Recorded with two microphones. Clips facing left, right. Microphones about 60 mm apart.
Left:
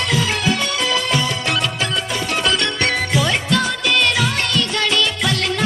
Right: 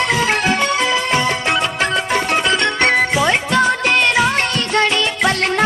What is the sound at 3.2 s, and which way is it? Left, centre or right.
Music, right.